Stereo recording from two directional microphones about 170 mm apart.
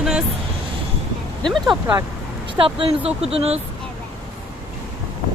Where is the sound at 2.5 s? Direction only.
30° right (ahead or behind).